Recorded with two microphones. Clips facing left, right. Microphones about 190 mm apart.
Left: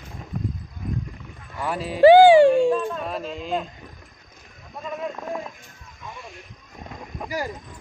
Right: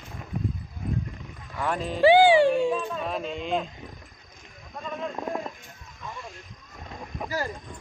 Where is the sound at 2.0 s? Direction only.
45° left (ahead or behind).